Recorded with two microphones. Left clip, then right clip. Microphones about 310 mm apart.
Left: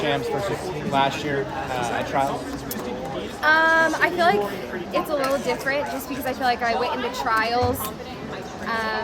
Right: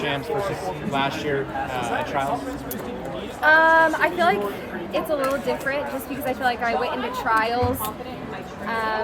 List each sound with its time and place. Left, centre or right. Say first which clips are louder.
0.0 s chatter: left 1 dB; left
0.9 s speech: left 2 dB; left
3.4 s a woman's voice: right 2 dB; centre
8.7 s a woman's voice: right 1 dB; centre